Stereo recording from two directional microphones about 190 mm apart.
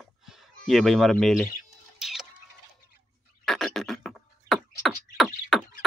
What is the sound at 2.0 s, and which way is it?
Tick-tock, centre (ahead or behind).